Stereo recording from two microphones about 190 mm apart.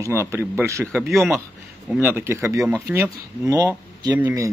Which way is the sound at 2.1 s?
15° right (ahead or behind).